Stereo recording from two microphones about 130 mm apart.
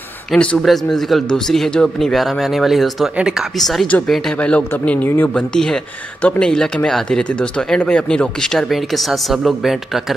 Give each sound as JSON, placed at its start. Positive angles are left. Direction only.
{"t": 0.3, "sound": "speech", "side_deg": 5}